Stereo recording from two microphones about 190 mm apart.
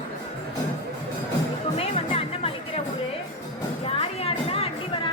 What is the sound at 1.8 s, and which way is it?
Music, 30° left (ahead or behind).